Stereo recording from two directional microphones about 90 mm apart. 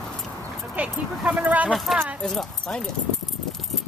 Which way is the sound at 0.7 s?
15° right (ahead or behind).